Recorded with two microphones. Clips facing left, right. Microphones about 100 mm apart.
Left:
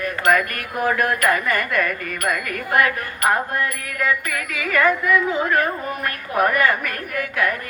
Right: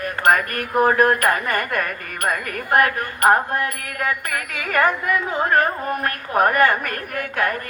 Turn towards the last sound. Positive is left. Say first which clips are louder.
# even
turn(degrees=-40)  # may be behind; listen again after turning